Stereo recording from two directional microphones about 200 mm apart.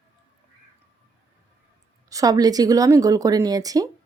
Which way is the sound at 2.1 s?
20° right (ahead or behind).